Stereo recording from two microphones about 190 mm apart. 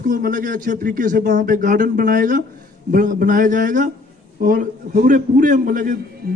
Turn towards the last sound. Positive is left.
turn(degrees=-50)  # may be behind; listen again after turning